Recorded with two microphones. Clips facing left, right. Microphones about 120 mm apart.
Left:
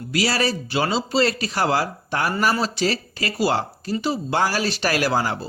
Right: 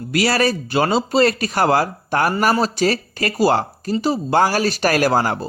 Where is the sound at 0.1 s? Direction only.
55° right (ahead or behind).